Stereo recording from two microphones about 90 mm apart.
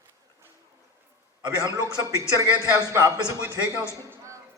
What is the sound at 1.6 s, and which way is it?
A man's voice, 45° right (ahead or behind).